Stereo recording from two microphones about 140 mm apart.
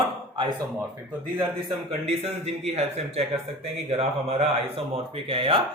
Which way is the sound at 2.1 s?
45° right (ahead or behind).